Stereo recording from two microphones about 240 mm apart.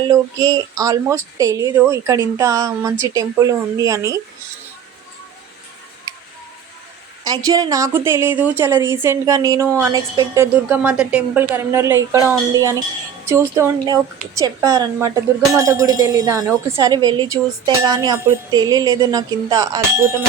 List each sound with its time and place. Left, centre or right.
0.1 s a woman's voice: centre
7.3 s a woman's voice: centre
13.2 s a woman's voice: centre